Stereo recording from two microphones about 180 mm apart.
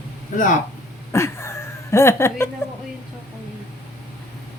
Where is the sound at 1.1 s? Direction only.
15° left (ahead or behind).